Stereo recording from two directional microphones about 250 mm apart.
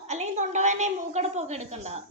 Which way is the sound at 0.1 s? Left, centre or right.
Right.